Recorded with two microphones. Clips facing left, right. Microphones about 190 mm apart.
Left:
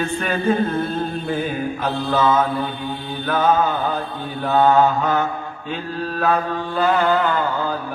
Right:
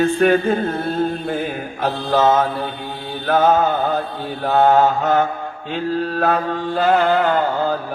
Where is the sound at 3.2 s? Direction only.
45° right (ahead or behind).